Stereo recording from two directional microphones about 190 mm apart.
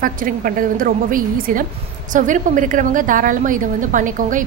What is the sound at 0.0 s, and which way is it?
A woman's voice, 45° right (ahead or behind).